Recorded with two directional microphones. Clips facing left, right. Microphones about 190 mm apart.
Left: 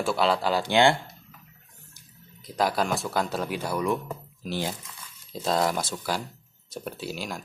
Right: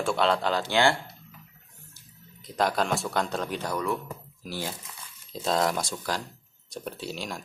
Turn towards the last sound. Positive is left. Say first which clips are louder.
# left 1 dB
turn(degrees=0)  # may be behind; listen again after turning